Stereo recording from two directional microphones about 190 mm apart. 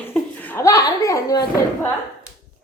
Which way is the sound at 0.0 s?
10° left (ahead or behind).